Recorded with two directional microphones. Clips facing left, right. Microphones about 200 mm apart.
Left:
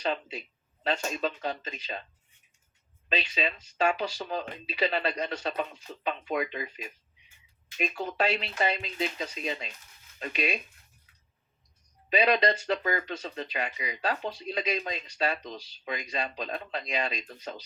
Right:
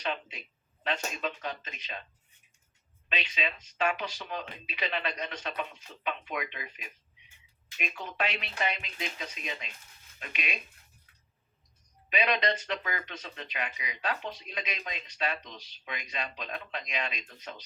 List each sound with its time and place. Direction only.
0.9 s speech: 35° left (ahead or behind)
3.1 s speech: 35° left (ahead or behind)
7.8 s speech: 35° left (ahead or behind)
12.0 s speech: 35° left (ahead or behind)